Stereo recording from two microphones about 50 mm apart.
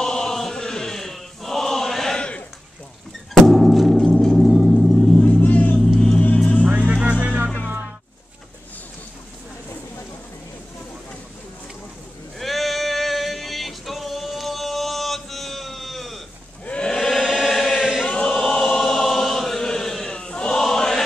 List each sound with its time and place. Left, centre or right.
0.0 s chant: centre
2.1 s a sound: left
3.3 s gong: centre
5.4 s vehicle: left
5.9 s vehicle: centre
6.9 s music: right
12.4 s male singing: centre
16.6 s a sound: centre
16.9 s chant: centre
18.0 s choir: centre
18.3 s choir: centre
20.6 s chant: centre